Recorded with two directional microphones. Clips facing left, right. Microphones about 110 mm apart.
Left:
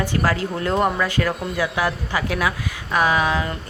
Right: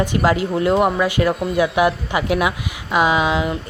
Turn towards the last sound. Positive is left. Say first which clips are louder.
# right 2 dB
turn(degrees=-15)  # may be behind; listen again after turning